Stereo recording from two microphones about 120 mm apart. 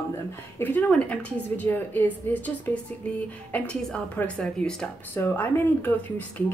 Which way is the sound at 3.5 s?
10° left (ahead or behind).